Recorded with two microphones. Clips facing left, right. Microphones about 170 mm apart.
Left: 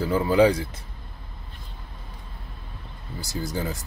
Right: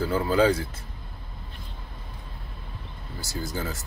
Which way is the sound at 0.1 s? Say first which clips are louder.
Left 4 dB; 15° left (ahead or behind).